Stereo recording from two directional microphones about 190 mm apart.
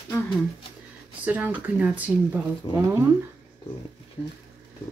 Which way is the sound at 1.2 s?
10° right (ahead or behind).